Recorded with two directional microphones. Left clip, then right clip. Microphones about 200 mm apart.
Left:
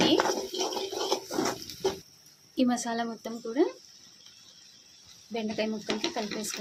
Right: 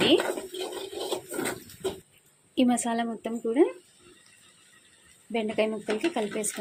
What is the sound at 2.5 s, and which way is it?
Speech, 15° right (ahead or behind).